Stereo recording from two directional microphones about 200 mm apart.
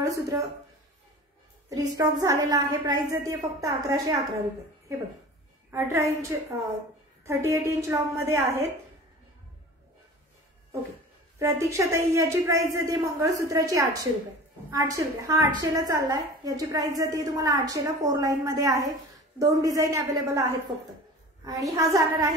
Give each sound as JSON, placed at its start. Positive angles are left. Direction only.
{"t": 0.0, "sound": "speech", "side_deg": -15}
{"t": 1.7, "sound": "a woman's voice", "side_deg": -15}
{"t": 5.7, "sound": "a woman's voice", "side_deg": -15}
{"t": 11.3, "sound": "a woman's voice", "side_deg": -15}
{"t": 20.7, "sound": "a woman's voice", "side_deg": -35}
{"t": 21.7, "sound": "a woman's voice", "side_deg": -15}